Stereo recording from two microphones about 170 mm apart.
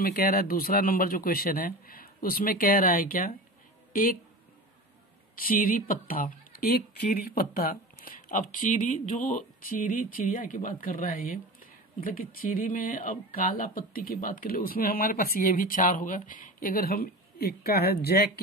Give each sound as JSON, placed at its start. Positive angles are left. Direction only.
{"t": 0.0, "sound": "speech", "side_deg": 60}
{"t": 5.3, "sound": "speech", "side_deg": 55}